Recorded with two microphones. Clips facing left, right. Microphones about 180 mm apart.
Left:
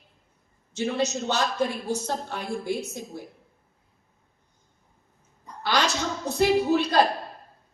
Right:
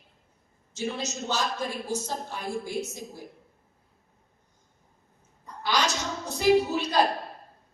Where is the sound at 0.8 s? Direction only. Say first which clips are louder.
Left 6 dB; 65° left (ahead or behind).